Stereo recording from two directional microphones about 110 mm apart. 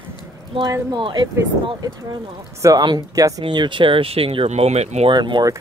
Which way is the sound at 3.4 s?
45° right (ahead or behind).